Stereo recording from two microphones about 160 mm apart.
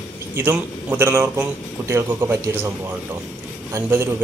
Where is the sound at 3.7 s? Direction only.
15° right (ahead or behind).